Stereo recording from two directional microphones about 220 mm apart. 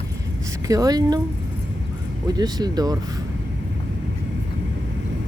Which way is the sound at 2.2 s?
15° right (ahead or behind).